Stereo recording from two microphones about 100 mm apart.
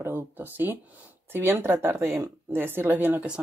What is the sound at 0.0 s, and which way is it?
Speech, 20° right (ahead or behind).